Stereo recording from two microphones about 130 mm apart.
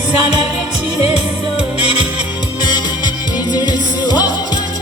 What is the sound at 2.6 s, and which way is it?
Music, 35° left (ahead or behind).